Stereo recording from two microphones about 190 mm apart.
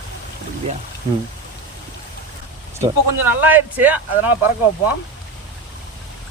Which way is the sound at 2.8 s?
10° right (ahead or behind).